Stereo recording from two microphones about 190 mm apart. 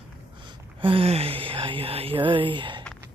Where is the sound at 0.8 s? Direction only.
30° right (ahead or behind).